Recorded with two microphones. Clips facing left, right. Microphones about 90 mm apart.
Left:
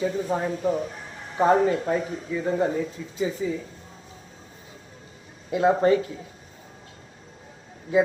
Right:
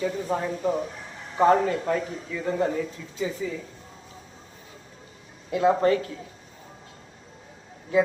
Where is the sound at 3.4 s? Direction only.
25° left (ahead or behind).